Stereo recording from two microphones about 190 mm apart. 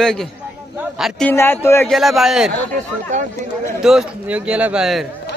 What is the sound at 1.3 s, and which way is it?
Speech, 10° left (ahead or behind).